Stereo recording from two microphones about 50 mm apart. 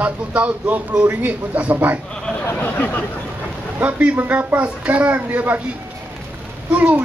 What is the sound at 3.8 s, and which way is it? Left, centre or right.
Speech, right.